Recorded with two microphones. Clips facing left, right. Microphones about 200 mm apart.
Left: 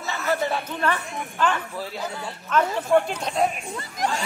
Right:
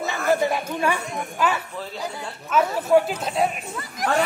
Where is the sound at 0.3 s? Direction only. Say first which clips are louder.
Right 3 dB; 10° right (ahead or behind).